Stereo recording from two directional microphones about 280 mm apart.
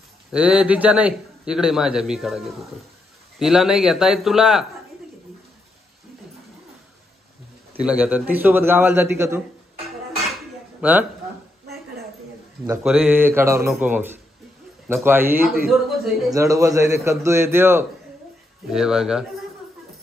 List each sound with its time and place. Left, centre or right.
0.3 s a man's voice: centre
7.8 s a man's voice: centre
10.8 s speech: centre
12.6 s a man's voice: centre
15.4 s a man's voice: right
15.7 s a man's voice: centre
16.3 s a man's voice: centre